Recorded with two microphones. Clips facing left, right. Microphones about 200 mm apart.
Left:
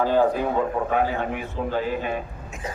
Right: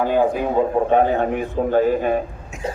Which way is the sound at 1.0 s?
45° right (ahead or behind).